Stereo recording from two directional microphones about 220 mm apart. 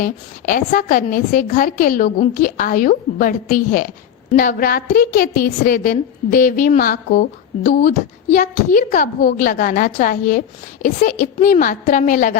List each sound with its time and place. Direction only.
0.0 s a woman's voice: 40° left (ahead or behind)